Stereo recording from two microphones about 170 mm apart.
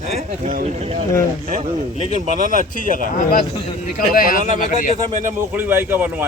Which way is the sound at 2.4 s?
50° right (ahead or behind).